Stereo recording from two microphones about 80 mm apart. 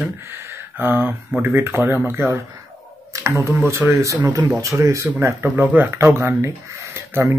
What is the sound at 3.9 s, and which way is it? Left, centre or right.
Speech, right.